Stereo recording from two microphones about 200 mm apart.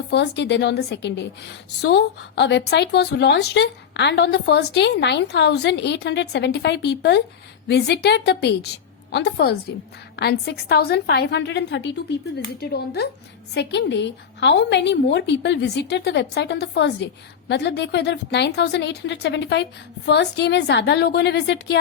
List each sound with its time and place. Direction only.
0.1 s speech: 60° left (ahead or behind)